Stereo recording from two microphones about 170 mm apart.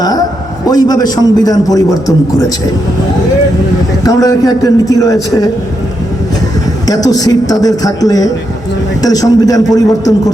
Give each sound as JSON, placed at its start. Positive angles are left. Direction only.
{"t": 0.0, "sound": "a sound", "side_deg": 20}
{"t": 0.7, "sound": "a man's voice", "side_deg": 20}
{"t": 4.0, "sound": "a man's voice", "side_deg": 20}
{"t": 6.8, "sound": "a man's voice", "side_deg": 20}